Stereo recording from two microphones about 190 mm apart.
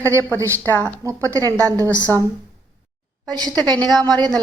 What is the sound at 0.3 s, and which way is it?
Speech, 15° right (ahead or behind).